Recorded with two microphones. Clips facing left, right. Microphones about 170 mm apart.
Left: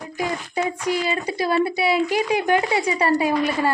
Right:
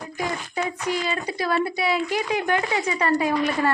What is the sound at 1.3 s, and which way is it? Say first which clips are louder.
Speech: left 4 dB; 30° left (ahead or behind).